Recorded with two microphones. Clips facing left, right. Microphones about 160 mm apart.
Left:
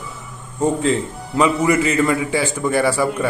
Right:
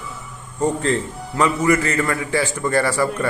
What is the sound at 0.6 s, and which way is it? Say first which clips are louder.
A man's voice: left 2 dB; 15° left (ahead or behind).